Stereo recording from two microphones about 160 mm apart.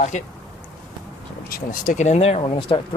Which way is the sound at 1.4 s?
60° left (ahead or behind).